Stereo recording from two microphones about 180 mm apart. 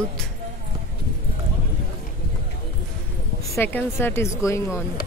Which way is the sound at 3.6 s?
10° left (ahead or behind).